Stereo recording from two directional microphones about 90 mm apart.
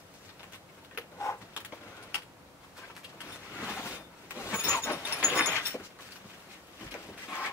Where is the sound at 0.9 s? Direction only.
35° left (ahead or behind).